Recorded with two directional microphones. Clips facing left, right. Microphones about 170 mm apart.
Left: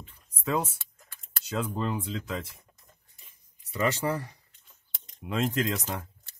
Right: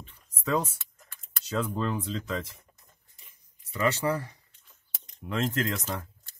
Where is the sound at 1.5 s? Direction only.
10° left (ahead or behind).